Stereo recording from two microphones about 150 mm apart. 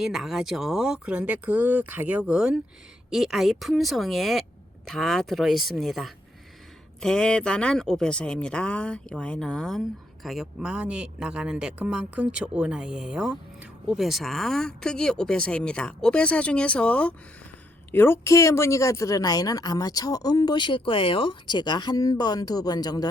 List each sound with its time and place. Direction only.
0.0 s speech: centre (ahead or behind); by 23.0 s 25° left (ahead or behind)